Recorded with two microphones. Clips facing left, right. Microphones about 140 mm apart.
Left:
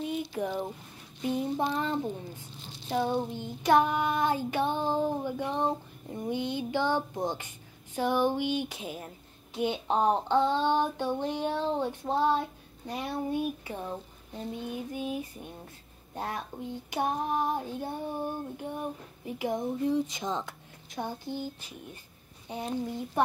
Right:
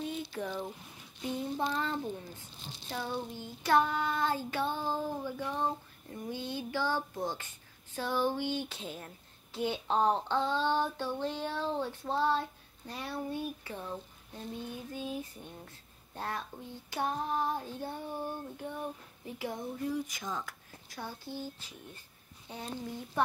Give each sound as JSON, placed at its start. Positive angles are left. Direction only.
{"t": 0.3, "sound": "child singing", "side_deg": 15}
{"t": 2.9, "sound": "speech", "side_deg": 20}
{"t": 3.3, "sound": "child singing", "side_deg": 20}